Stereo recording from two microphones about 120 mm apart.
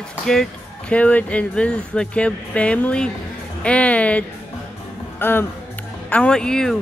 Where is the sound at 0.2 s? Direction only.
5° left (ahead or behind).